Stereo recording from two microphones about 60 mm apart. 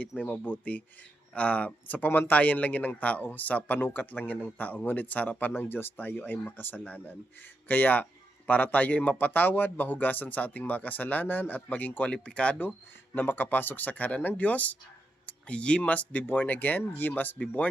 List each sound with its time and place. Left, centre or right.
0.2 s speech: left
12.1 s speech: centre
13.1 s speech: left
15.3 s a sound: centre
15.8 s speech: left